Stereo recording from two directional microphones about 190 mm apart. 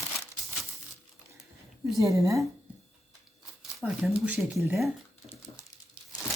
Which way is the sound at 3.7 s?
5° right (ahead or behind).